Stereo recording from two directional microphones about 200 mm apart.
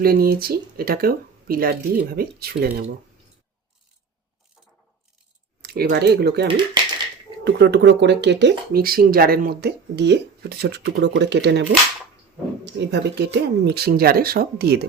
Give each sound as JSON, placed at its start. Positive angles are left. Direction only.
{"t": 0.0, "sound": "speech", "side_deg": -50}
{"t": 5.6, "sound": "speech", "side_deg": -50}
{"t": 12.6, "sound": "speech", "side_deg": -55}